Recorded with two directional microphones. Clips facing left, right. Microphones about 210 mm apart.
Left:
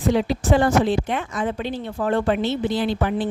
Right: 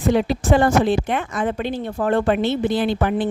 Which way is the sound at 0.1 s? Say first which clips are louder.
Right 2 dB; 55° right (ahead or behind).